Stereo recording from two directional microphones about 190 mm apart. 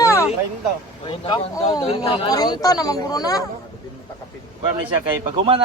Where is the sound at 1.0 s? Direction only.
25° left (ahead or behind).